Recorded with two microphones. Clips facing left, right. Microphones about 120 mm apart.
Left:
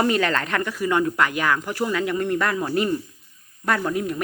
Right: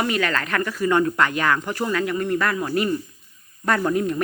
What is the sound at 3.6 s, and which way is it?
Speech, centre (ahead or behind).